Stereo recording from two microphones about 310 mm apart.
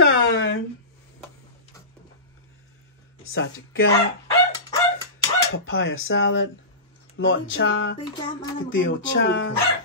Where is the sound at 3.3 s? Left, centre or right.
Left.